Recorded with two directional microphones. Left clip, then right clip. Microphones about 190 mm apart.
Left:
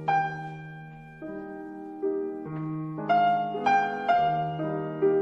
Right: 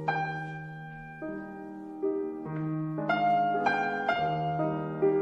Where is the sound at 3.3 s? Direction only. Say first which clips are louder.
Left 2 dB; 10° left (ahead or behind).